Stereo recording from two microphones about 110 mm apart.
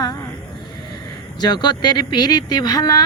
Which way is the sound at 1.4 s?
40° left (ahead or behind).